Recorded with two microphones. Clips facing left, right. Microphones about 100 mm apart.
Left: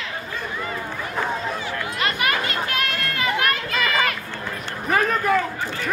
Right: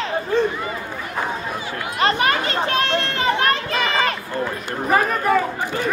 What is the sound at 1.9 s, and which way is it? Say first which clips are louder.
Children playing: right 6 dB; 30° right (ahead or behind).